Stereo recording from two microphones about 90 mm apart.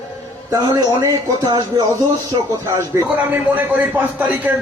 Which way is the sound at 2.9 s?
35° right (ahead or behind).